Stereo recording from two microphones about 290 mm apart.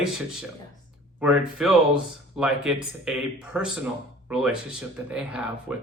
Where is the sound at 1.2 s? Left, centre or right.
Centre.